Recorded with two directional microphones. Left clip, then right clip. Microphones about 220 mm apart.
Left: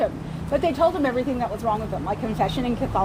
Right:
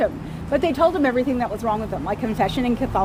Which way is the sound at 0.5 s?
35° right (ahead or behind).